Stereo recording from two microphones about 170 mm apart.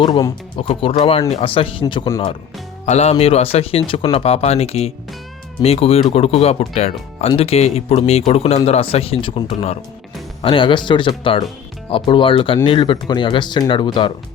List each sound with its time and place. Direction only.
0.0 s speech: 25° left (ahead or behind)
2.0 s speech: 20° left (ahead or behind)
2.8 s speech: 40° left (ahead or behind)